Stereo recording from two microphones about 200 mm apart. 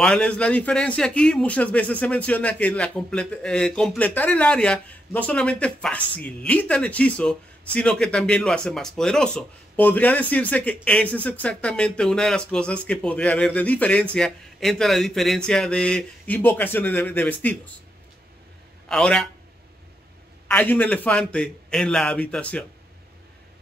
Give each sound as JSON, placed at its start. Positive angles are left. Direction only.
{"t": 0.0, "sound": "speech", "side_deg": 5}
{"t": 18.9, "sound": "speech", "side_deg": 5}
{"t": 20.4, "sound": "speech", "side_deg": 10}